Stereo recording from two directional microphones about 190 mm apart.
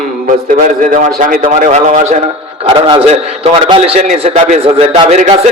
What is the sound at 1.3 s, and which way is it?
A man's voice, 40° right (ahead or behind).